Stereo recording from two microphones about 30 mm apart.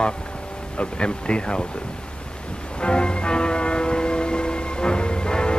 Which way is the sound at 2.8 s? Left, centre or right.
Left.